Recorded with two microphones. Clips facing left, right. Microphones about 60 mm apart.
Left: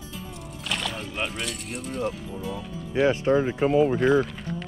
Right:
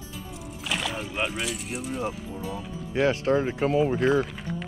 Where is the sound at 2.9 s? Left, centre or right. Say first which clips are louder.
Left 2 dB; right.